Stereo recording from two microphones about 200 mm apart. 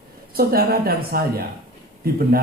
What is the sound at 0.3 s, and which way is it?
Speech, 50° right (ahead or behind).